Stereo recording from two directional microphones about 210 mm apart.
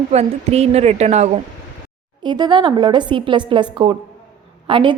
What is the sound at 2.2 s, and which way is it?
A woman's voice, 20° right (ahead or behind).